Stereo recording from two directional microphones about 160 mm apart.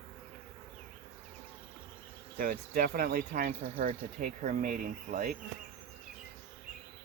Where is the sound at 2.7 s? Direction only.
70° right (ahead or behind).